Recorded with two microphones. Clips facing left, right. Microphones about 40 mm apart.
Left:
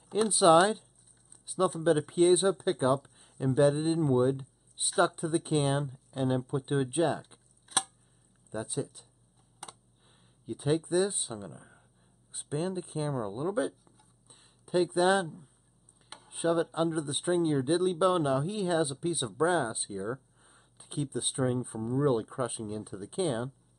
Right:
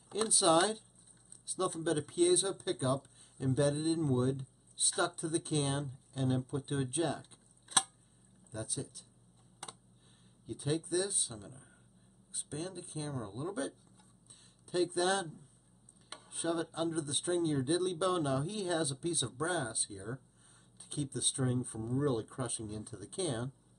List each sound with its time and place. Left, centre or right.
0.3 s speech: left
7.6 s a sound: centre
8.5 s speech: left
9.6 s computer keyboard: centre
10.4 s speech: left
16.3 s a sound: centre
16.7 s speech: centre